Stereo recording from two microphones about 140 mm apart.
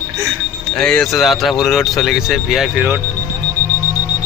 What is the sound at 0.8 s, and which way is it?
Speech, 5° left (ahead or behind).